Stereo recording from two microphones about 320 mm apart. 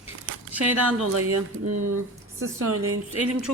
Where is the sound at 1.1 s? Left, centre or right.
Right.